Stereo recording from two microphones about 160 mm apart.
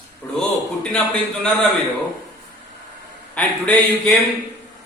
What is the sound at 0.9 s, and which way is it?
Speech, 5° left (ahead or behind).